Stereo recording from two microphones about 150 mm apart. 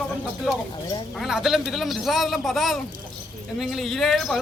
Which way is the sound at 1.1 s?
Centre (ahead or behind).